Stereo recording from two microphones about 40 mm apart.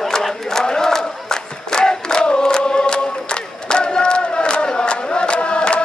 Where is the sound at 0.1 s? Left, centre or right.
Centre.